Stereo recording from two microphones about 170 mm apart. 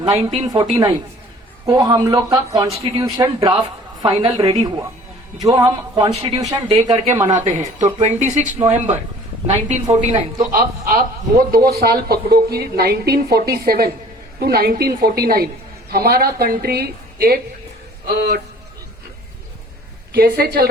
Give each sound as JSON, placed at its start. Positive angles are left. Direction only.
{"t": 0.0, "sound": "speech", "side_deg": -35}
{"t": 0.4, "sound": "speech", "side_deg": -25}
{"t": 2.6, "sound": "speech", "side_deg": -35}
{"t": 5.4, "sound": "speech", "side_deg": -20}
{"t": 6.8, "sound": "speech", "side_deg": -35}
{"t": 10.5, "sound": "a man's voice", "side_deg": -60}
{"t": 20.1, "sound": "a man's voice", "side_deg": -65}